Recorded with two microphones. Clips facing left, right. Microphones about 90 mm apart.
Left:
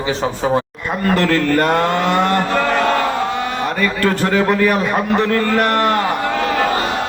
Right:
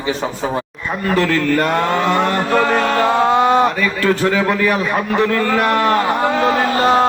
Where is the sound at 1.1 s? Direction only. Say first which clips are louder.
Even; 40° left (ahead or behind).